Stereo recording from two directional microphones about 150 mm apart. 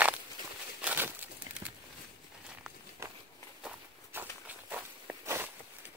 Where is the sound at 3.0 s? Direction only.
20° right (ahead or behind).